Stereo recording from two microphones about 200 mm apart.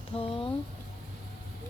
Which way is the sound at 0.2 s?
30° left (ahead or behind).